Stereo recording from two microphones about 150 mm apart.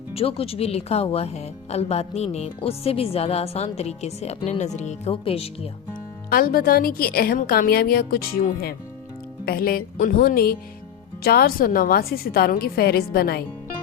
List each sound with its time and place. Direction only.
0.1 s speech: 40° left (ahead or behind)
6.3 s a woman's voice: 75° left (ahead or behind)
9.5 s a woman's voice: 90° left